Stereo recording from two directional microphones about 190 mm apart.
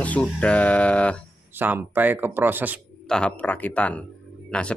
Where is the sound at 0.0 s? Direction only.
5° left (ahead or behind).